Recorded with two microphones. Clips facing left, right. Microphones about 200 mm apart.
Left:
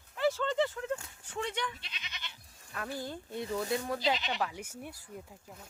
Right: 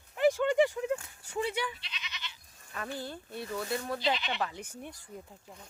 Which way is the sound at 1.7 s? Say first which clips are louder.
Right 2 dB; 50° left (ahead or behind).